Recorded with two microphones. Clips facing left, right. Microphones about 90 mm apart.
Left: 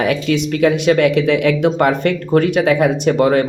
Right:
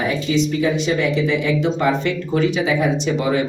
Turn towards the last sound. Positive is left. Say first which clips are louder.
# left 6 dB
turn(degrees=55)  # may be behind; listen again after turning